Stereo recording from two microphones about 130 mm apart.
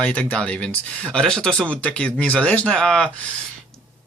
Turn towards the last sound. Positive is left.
turn(degrees=5)  # may be behind; listen again after turning